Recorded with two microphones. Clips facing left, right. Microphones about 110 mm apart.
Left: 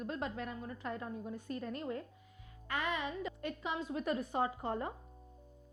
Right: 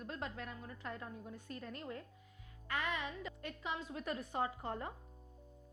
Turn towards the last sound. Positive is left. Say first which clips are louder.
# left 4 dB
turn(degrees=20)  # may be behind; listen again after turning